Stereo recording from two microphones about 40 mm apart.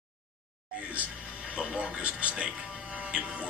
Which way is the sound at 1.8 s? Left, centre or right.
Right.